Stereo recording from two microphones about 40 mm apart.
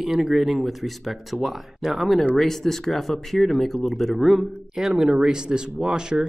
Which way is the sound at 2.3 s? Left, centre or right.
Centre.